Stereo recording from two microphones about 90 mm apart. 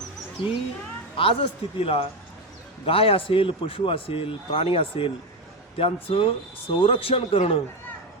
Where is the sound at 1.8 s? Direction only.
90° left.